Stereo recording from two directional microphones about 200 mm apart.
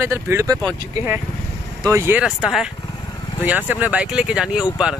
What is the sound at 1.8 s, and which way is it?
Speech, 15° right (ahead or behind).